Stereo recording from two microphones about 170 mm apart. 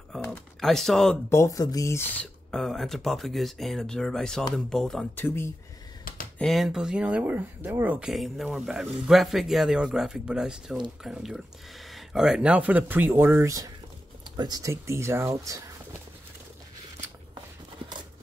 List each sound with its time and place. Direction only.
0.2 s speech: 5° left (ahead or behind)
1.3 s speech: 20° left (ahead or behind)
6.3 s speech: centre (ahead or behind); by 15.7 s 20° right (ahead or behind)